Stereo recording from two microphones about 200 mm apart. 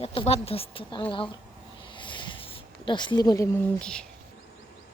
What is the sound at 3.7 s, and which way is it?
Speech, 5° left (ahead or behind).